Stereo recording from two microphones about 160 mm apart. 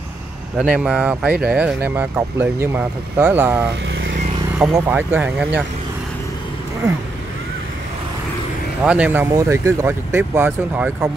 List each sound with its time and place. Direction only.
0.6 s speech: 5° right (ahead or behind)
4.7 s speech: 15° right (ahead or behind)
8.8 s speech: 10° right (ahead or behind)